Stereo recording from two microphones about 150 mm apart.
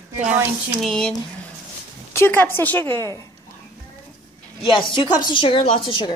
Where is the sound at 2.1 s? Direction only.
15° left (ahead or behind).